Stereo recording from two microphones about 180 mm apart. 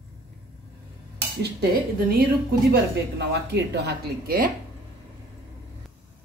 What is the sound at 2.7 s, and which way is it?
Speech, 70° right (ahead or behind).